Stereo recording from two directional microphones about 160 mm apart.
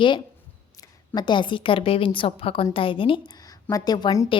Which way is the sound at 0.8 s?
25° left (ahead or behind).